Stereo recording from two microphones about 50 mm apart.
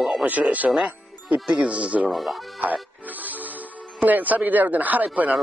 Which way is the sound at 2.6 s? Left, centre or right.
Right.